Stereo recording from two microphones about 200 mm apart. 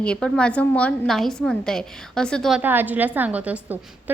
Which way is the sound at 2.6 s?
10° right (ahead or behind).